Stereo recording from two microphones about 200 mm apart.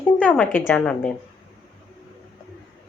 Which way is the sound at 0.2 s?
5° left (ahead or behind).